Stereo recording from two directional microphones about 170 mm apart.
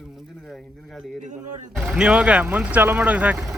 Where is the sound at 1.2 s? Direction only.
45° right (ahead or behind).